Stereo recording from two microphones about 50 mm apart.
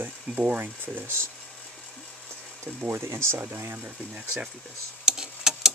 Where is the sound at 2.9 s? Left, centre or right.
Right.